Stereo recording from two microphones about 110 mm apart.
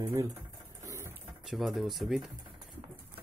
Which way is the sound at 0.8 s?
30° right (ahead or behind).